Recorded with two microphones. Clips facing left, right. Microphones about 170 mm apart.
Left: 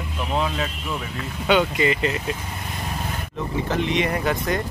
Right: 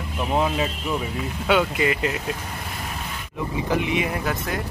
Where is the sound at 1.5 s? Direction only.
5° right (ahead or behind).